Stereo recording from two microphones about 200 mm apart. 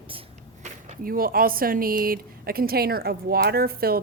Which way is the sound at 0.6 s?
40° right (ahead or behind).